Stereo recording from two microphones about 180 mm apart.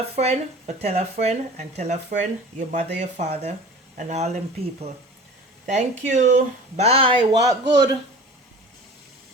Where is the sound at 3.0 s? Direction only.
40° right (ahead or behind); by 7.9 s 20° right (ahead or behind).